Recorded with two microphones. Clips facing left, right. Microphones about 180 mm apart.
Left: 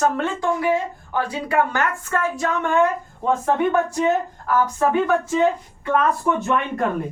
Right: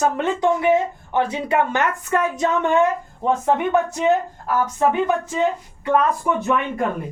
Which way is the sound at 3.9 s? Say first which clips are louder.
Right 1 dB; 20° right (ahead or behind).